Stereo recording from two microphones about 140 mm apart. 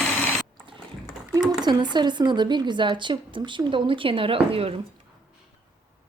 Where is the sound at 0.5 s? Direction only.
35° right (ahead or behind).